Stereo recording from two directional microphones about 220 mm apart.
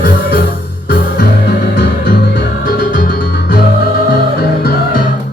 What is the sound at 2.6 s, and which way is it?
Music, 40° left (ahead or behind).